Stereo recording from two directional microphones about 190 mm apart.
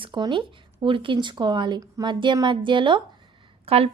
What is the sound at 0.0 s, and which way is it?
A woman's voice, 25° right (ahead or behind).